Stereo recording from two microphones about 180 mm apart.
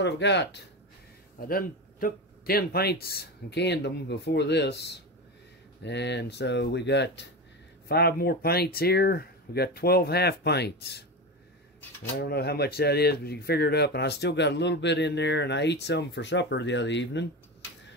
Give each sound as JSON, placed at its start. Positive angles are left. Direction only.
{"t": 0.0, "sound": "speech", "side_deg": 75}
{"t": 1.5, "sound": "speech", "side_deg": 50}
{"t": 7.9, "sound": "speech", "side_deg": 60}
{"t": 12.2, "sound": "speech", "side_deg": 60}